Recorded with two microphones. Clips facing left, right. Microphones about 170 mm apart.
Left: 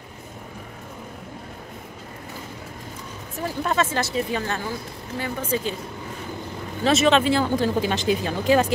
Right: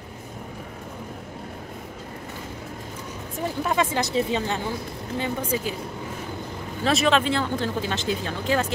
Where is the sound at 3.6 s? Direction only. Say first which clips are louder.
Left 1 dB; 10° right (ahead or behind).